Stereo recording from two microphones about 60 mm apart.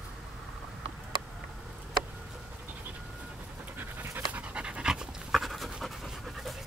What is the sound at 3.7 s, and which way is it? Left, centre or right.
Pant, right.